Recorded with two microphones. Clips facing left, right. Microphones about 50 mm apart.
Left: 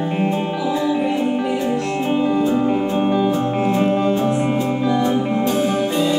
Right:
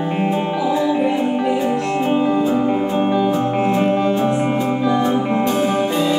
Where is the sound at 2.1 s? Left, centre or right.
Centre.